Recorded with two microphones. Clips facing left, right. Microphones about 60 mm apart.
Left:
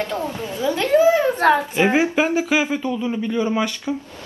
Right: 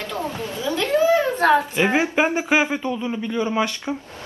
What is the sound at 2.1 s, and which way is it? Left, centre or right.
Speech, right.